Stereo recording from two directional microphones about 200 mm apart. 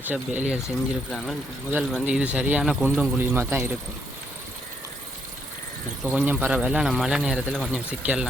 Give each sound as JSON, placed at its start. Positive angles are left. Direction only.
{"t": 0.1, "sound": "speech", "side_deg": -10}
{"t": 1.1, "sound": "speech", "side_deg": 5}
{"t": 6.0, "sound": "speech", "side_deg": 0}